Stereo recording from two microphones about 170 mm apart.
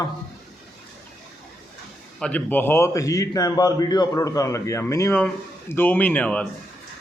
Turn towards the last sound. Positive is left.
turn(degrees=5)  # may be behind; listen again after turning